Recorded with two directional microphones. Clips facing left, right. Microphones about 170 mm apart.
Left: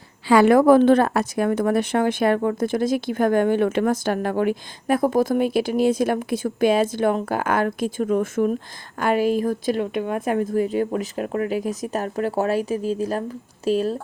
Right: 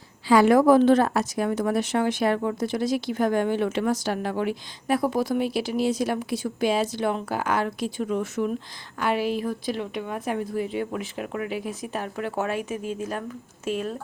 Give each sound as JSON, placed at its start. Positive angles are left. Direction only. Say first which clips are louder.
{"t": 0.3, "sound": "a woman's voice", "louder": "left 3 dB", "side_deg": 60}